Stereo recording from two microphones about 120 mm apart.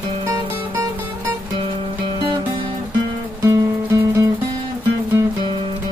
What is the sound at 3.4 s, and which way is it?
Music, 25° right (ahead or behind).